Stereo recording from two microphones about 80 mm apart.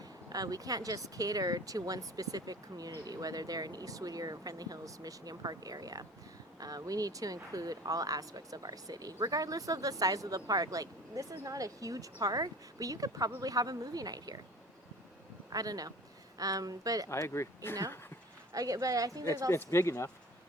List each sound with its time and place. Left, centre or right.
0.0 s speech: right
15.5 s speech: right
17.1 s speech: left
18.5 s speech: right
19.5 s speech: left